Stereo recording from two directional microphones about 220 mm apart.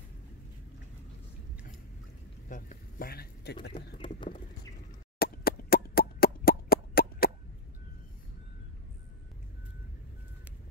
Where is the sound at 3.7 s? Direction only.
20° left (ahead or behind).